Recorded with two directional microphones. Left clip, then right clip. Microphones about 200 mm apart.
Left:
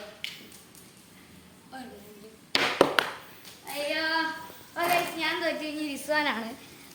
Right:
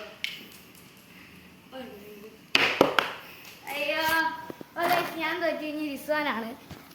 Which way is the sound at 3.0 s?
40° right (ahead or behind).